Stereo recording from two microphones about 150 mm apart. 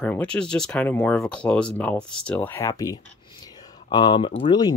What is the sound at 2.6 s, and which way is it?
Speech, 25° left (ahead or behind).